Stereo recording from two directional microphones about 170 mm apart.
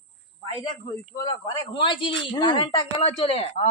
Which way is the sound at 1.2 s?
20° left (ahead or behind).